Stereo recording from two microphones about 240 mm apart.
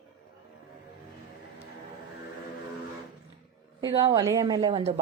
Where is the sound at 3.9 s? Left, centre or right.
Centre.